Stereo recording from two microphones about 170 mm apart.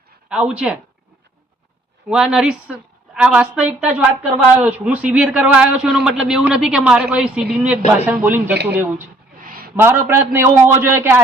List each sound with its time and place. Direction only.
0.3 s a man's voice: 5° right (ahead or behind)
2.0 s a woman's voice: 5° right (ahead or behind)
9.4 s a sound: 55° right (ahead or behind)
9.7 s a man's voice: 15° right (ahead or behind)